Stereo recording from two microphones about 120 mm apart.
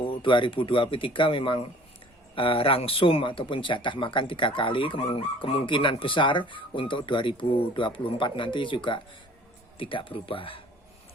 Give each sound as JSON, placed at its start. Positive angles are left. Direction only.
{"t": 0.0, "sound": "speech", "side_deg": 45}